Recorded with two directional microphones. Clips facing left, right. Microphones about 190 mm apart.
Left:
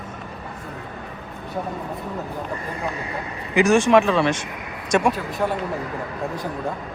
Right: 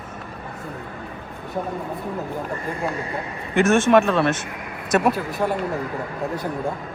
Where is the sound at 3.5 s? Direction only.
Centre (ahead or behind).